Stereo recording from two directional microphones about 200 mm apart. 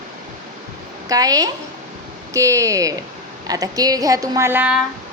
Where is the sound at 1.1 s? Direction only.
20° right (ahead or behind).